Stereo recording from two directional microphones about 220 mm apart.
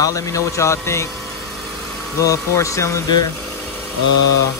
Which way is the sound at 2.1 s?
15° left (ahead or behind).